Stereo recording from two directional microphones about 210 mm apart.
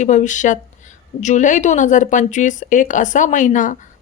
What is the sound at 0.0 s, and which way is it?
Speech, 35° left (ahead or behind).